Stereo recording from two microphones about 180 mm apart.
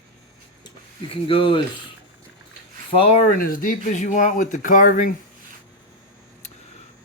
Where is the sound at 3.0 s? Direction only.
40° left (ahead or behind).